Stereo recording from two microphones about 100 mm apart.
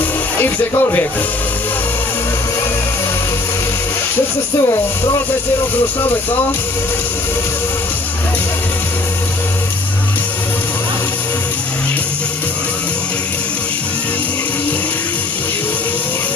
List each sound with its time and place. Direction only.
0.4 s speech: 25° left (ahead or behind)
4.6 s speech: 35° left (ahead or behind)